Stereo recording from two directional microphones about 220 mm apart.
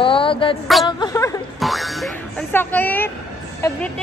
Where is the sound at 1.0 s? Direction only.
15° left (ahead or behind).